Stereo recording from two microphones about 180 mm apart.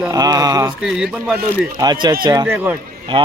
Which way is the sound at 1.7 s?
25° right (ahead or behind).